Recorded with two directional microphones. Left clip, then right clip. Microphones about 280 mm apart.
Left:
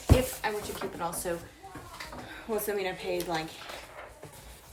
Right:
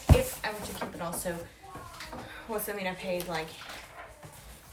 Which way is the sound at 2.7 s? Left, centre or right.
Centre.